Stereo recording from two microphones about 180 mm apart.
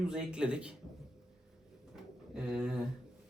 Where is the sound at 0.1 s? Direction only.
5° right (ahead or behind).